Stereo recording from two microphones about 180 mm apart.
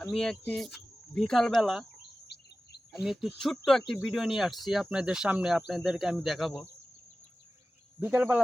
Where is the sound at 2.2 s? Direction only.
70° left (ahead or behind).